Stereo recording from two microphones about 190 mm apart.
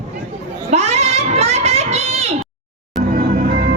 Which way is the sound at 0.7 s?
35° right (ahead or behind).